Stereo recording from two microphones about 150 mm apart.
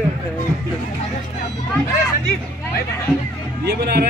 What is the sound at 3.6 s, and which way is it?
Speech, 90° right.